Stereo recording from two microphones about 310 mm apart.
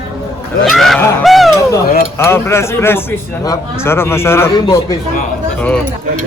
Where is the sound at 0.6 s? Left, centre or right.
Centre.